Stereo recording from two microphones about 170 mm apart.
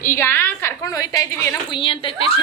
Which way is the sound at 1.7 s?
30° left (ahead or behind).